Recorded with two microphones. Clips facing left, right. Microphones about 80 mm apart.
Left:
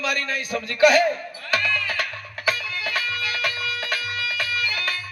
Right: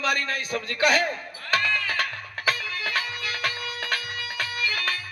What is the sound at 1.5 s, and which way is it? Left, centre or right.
Music, right.